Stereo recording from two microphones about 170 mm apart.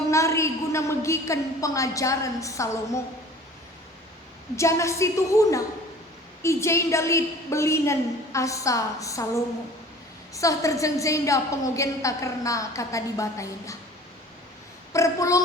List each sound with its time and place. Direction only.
0.1 s a woman's voice: 15° left (ahead or behind)
4.5 s a woman's voice: 15° left (ahead or behind)
10.3 s a woman's voice: 20° left (ahead or behind)
14.9 s a woman's voice: 20° left (ahead or behind)